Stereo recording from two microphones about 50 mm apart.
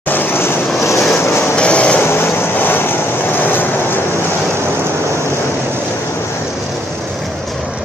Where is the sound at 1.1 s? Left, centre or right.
Left.